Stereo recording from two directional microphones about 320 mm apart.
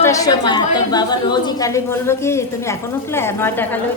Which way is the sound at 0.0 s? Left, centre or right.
Centre.